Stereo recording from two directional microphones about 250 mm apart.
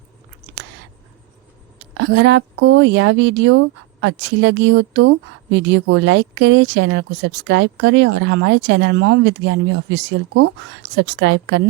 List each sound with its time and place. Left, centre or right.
2.0 s speech: right